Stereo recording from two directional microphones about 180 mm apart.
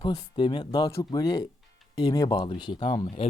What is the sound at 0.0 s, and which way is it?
Speech, 25° left (ahead or behind).